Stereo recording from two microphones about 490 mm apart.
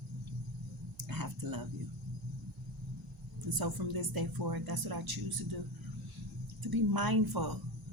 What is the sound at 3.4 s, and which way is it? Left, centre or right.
Speech, right.